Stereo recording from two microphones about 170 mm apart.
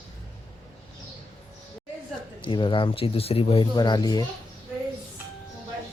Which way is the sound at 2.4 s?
30° left (ahead or behind).